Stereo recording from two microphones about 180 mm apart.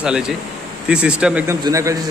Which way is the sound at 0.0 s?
5° right (ahead or behind).